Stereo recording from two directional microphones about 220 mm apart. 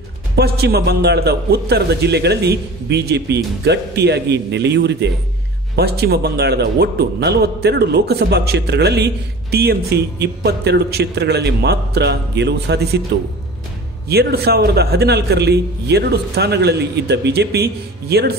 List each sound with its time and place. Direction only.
0.4 s a man's voice: 45° right (ahead or behind)
14.0 s a man's voice: 45° right (ahead or behind)